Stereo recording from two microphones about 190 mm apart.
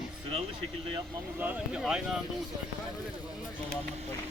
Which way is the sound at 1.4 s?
10° right (ahead or behind).